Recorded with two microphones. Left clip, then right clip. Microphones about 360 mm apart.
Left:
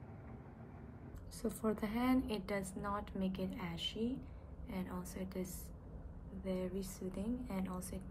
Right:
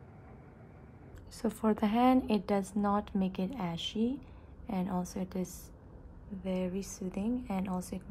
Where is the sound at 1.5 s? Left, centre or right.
Centre.